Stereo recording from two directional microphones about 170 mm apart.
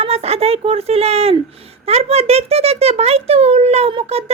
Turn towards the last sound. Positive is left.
turn(degrees=-35)  # may be behind; listen again after turning